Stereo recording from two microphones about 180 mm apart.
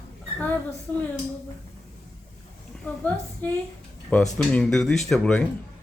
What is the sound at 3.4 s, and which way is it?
Speech, 10° left (ahead or behind).